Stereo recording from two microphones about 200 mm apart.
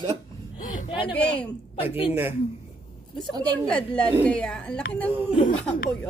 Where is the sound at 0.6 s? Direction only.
40° left (ahead or behind).